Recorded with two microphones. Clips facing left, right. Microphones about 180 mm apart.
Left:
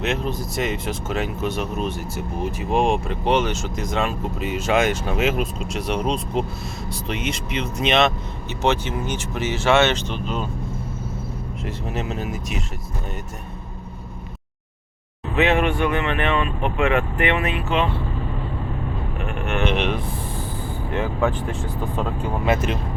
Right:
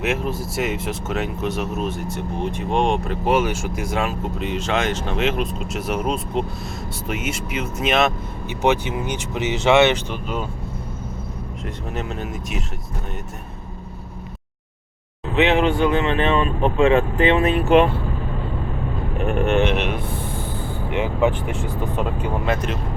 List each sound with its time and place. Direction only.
0.0 s speech: 5° right (ahead or behind)
11.6 s speech: centre (ahead or behind)
15.4 s speech: 20° right (ahead or behind)
17.6 s speech: 50° right (ahead or behind)
19.2 s vehicle: 40° right (ahead or behind)
19.7 s speech: 5° right (ahead or behind)
20.6 s vehicle: 20° right (ahead or behind)
21.5 s speech: 20° right (ahead or behind)
22.4 s speech: 5° left (ahead or behind)